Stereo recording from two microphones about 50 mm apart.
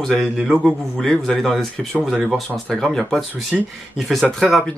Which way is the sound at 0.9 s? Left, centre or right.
Centre.